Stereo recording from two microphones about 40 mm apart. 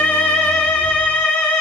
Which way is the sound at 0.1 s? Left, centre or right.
Left.